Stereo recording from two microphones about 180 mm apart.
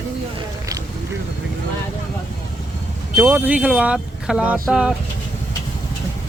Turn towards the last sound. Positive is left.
turn(degrees=-5)  # may be behind; listen again after turning